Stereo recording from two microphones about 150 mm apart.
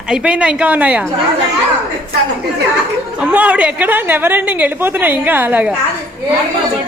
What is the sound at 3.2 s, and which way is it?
A woman's voice, 10° right (ahead or behind).